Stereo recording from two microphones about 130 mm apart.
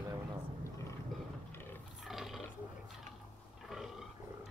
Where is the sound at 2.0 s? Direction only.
Centre (ahead or behind).